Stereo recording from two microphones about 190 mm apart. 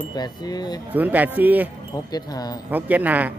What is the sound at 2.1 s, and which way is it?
Speech, 20° left (ahead or behind).